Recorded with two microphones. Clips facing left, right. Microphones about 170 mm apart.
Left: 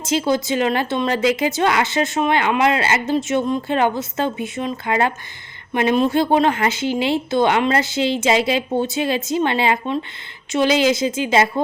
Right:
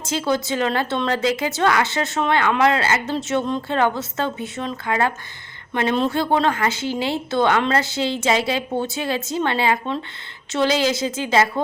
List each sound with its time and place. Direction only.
0.0 s speech: 20° left (ahead or behind)